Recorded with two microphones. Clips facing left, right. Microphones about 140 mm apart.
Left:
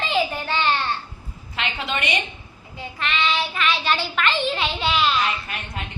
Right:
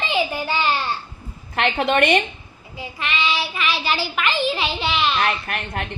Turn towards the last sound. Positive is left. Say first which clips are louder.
# right 5 dB
turn(degrees=-60)  # may be behind; listen again after turning